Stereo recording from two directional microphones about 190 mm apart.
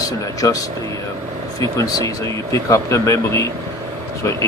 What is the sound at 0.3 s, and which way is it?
Speech, 15° left (ahead or behind).